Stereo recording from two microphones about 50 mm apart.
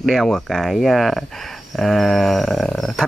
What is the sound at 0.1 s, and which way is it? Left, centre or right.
Speech, centre.